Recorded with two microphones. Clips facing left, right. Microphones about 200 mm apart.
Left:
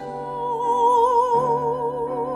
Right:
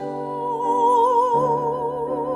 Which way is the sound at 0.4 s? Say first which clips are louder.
Left 1 dB; centre (ahead or behind).